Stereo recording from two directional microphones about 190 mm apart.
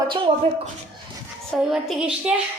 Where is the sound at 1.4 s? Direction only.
Centre (ahead or behind).